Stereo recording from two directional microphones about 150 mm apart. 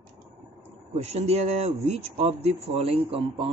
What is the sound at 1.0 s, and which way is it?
Speech, 45° right (ahead or behind).